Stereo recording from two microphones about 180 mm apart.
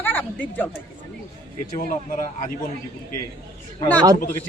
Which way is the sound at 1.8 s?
45° left (ahead or behind).